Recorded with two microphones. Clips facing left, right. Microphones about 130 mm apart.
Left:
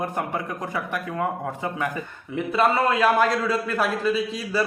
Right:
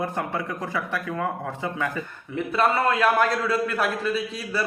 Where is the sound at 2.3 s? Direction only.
Centre (ahead or behind).